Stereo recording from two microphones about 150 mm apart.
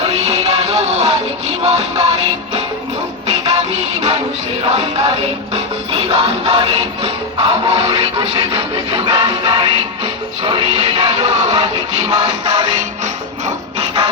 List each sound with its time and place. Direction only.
0.0 s music: 45° right (ahead or behind)
4.6 s music: 40° right (ahead or behind)
13.7 s a sound: 40° right (ahead or behind)